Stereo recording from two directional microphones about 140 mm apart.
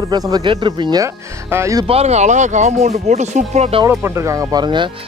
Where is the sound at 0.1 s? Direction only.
30° right (ahead or behind).